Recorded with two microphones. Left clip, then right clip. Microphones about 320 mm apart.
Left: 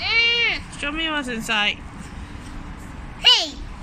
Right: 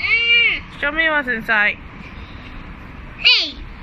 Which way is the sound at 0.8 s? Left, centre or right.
Centre.